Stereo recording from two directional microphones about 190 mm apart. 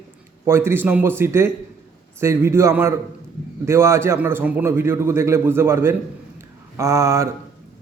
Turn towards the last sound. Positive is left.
turn(degrees=-15)  # may be behind; listen again after turning